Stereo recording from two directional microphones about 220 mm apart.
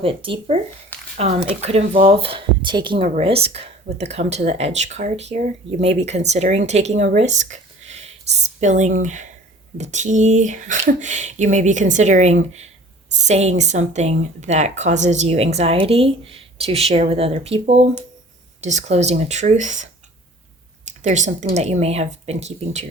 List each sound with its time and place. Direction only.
0.0 s speech: 25° right (ahead or behind)
0.9 s a sound: 10° left (ahead or behind)
1.6 s speech: 25° right (ahead or behind)